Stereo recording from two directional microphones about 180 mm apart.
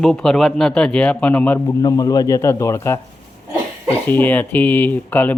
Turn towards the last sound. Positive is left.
turn(degrees=10)  # may be behind; listen again after turning